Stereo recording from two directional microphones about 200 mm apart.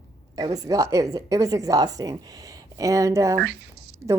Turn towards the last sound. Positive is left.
turn(degrees=-55)  # may be behind; listen again after turning